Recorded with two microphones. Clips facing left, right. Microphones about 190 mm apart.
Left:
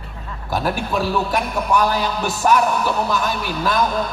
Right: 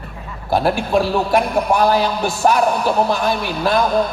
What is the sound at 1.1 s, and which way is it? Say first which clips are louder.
A man's voice: right 5 dB; 40° right (ahead or behind).